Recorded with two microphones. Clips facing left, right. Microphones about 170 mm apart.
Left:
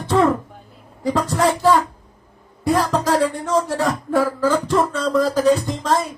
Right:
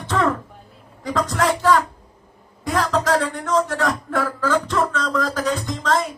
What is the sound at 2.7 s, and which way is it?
Speech, 10° left (ahead or behind).